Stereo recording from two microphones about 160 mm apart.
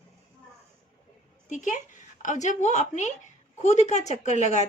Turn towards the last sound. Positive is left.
turn(degrees=45)  # may be behind; listen again after turning